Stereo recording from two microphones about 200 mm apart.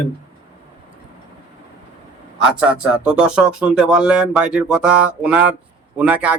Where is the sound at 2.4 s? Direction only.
5° right (ahead or behind).